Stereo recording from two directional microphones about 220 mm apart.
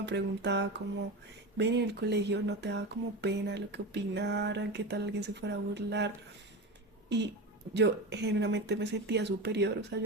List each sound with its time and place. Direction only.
0.0 s speech: 50° right (ahead or behind)
7.7 s speech: 50° right (ahead or behind)